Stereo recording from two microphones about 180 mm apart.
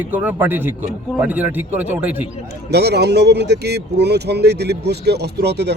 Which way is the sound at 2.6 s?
65° right (ahead or behind).